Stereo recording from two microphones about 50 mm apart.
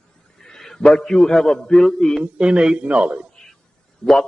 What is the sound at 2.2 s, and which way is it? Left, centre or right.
A man's voice, centre.